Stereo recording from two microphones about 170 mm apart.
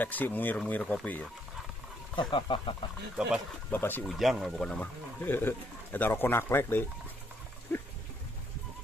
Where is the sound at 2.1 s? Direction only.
30° left (ahead or behind).